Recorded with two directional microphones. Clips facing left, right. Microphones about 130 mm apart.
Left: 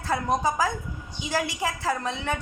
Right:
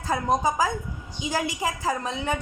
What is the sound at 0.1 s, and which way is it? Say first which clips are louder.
A woman's voice: right 1 dB; 15° right (ahead or behind).